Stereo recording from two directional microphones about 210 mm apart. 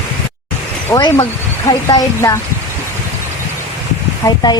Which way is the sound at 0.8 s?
20° left (ahead or behind).